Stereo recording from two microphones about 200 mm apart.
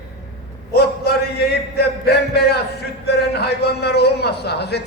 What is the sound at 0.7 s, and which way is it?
A man's voice, 50° left (ahead or behind).